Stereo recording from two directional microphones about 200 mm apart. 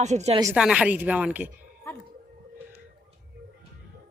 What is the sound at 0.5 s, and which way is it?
Speech, 5° right (ahead or behind).